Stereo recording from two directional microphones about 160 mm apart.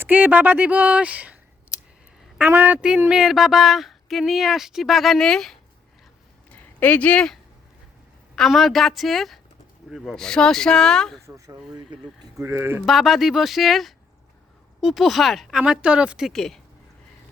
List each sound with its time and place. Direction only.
0.0 s speech: 10° right (ahead or behind)
2.4 s speech: 10° right (ahead or behind); by 7.3 s 5° left (ahead or behind)
8.4 s speech: centre (ahead or behind)
11.3 s speech: 20° right (ahead or behind)
12.8 s speech: centre (ahead or behind)